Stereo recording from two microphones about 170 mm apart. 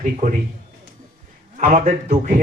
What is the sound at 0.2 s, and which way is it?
Speech, 45° right (ahead or behind).